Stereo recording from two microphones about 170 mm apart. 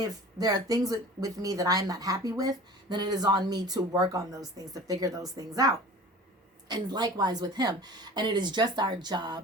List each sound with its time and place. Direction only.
0.0 s speech: 20° right (ahead or behind)
6.7 s speech: 25° right (ahead or behind)